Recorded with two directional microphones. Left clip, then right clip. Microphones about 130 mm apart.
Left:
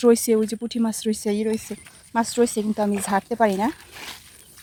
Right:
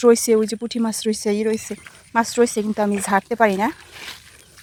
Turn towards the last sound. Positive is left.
turn(degrees=10)  # may be behind; listen again after turning